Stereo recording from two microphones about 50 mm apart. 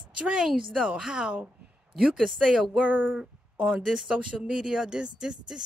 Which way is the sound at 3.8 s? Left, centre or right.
Centre.